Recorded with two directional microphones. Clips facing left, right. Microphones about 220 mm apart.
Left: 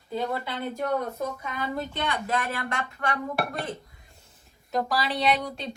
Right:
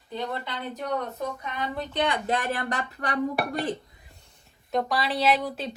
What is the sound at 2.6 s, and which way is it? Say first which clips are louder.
Speech: right 1 dB; 35° right (ahead or behind).